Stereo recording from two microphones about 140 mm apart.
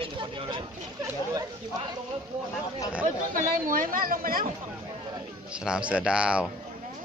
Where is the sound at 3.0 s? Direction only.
80° right.